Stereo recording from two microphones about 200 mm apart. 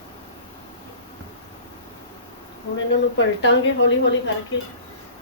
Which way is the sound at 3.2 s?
65° left (ahead or behind).